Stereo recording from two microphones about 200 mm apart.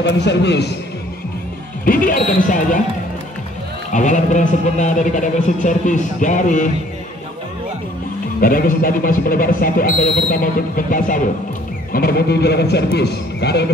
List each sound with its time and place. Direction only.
0.0 s a man's voice: 60° left (ahead or behind)
1.9 s speech: 45° left (ahead or behind)
3.9 s speech: 35° left (ahead or behind)
8.4 s a man's voice: 45° left (ahead or behind)